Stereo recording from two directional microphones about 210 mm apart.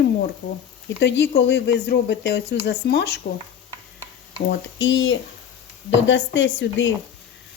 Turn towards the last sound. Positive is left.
turn(degrees=60)  # may be behind; listen again after turning